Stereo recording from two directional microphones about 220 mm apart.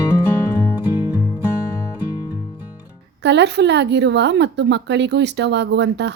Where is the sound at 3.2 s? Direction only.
50° right (ahead or behind).